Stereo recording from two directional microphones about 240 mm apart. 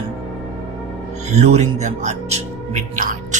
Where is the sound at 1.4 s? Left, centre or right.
Right.